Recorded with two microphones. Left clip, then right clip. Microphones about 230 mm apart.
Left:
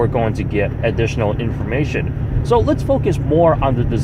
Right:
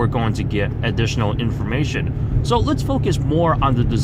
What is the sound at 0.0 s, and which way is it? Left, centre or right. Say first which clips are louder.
Speech: left 4 dB; right.